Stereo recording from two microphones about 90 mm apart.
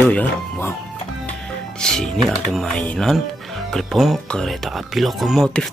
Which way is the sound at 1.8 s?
5° left (ahead or behind).